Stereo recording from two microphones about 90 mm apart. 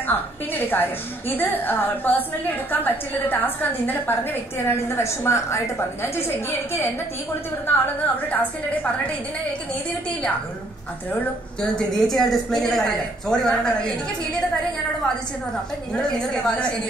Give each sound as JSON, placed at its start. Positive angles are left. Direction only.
{"t": 0.0, "sound": "a woman's voice", "side_deg": 20}
{"t": 7.6, "sound": "a woman's voice", "side_deg": 20}
{"t": 11.7, "sound": "a woman's voice", "side_deg": 5}
{"t": 16.0, "sound": "speech", "side_deg": 10}